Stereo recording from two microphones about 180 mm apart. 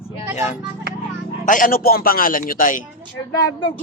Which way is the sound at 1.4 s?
50° left (ahead or behind).